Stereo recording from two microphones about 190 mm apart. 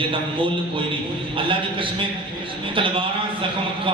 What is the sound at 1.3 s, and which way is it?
A man's voice, 25° right (ahead or behind).